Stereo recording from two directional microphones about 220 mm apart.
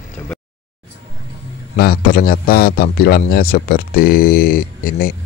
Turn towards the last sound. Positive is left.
turn(degrees=40)  # may be behind; listen again after turning